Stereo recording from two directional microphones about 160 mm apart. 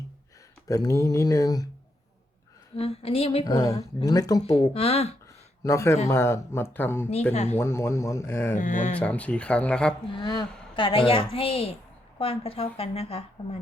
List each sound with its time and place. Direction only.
0.7 s speech: 20° left (ahead or behind)
2.7 s a woman's voice: 35° left (ahead or behind)
3.4 s speech: 20° left (ahead or behind)
4.4 s a woman's voice: 35° left (ahead or behind)
5.6 s speech: 20° left (ahead or behind)
8.5 s speech: 55° left (ahead or behind)
9.0 s speech: 10° left (ahead or behind)
10.2 s a woman's voice: 30° left (ahead or behind)